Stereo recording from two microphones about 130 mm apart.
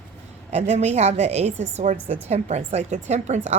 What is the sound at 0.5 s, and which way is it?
Speech, 60° right (ahead or behind).